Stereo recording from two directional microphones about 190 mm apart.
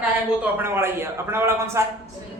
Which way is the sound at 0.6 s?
10° right (ahead or behind).